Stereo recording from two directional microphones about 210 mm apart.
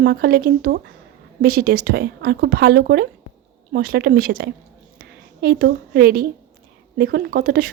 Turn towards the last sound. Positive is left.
turn(degrees=-45)  # may be behind; listen again after turning